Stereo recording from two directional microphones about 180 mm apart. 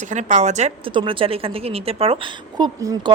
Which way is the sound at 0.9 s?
30° right (ahead or behind).